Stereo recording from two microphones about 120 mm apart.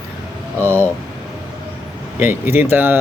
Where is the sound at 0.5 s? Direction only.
15° left (ahead or behind).